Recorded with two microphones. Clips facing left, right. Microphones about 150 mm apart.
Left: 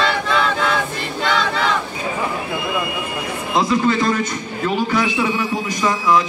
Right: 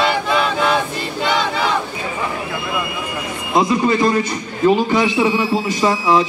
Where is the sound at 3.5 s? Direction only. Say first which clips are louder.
Right 2 dB; 20° right (ahead or behind).